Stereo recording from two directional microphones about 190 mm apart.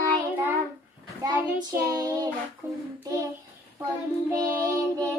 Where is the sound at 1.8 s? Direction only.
20° right (ahead or behind).